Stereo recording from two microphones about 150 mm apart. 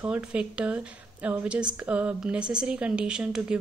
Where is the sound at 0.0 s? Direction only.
10° right (ahead or behind).